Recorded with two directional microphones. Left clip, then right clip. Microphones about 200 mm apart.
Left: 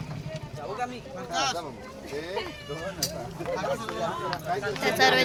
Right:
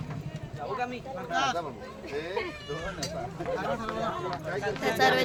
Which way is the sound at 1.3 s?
50° right (ahead or behind).